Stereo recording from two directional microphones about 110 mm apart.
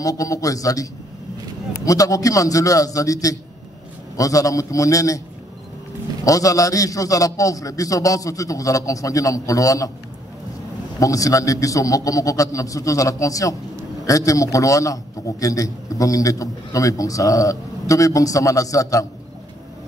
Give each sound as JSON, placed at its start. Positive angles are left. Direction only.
{"t": 0.0, "sound": "a man's voice", "side_deg": 30}
{"t": 1.9, "sound": "a man's voice", "side_deg": 30}
{"t": 6.2, "sound": "a man's voice", "side_deg": 30}
{"t": 11.0, "sound": "a man's voice", "side_deg": 30}